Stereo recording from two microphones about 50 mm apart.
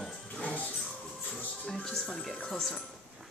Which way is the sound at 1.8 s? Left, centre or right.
Centre.